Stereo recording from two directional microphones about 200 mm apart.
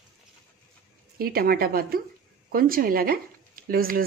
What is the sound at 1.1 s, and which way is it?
Speech, 50° right (ahead or behind).